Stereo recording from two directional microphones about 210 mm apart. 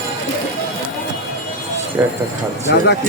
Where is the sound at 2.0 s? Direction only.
10° right (ahead or behind).